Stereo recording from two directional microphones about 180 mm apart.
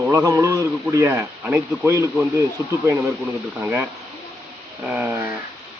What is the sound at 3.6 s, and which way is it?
Speech, 10° right (ahead or behind).